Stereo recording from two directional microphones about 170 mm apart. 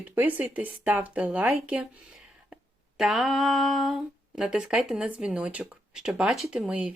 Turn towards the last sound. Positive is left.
turn(degrees=-5)  # may be behind; listen again after turning